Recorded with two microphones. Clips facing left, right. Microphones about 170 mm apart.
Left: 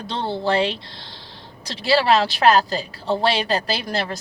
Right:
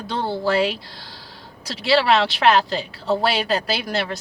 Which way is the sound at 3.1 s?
5° right (ahead or behind).